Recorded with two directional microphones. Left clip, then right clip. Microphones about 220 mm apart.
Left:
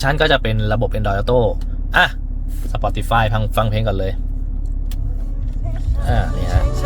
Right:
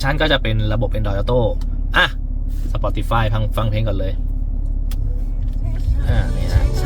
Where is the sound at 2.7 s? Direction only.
45° left (ahead or behind).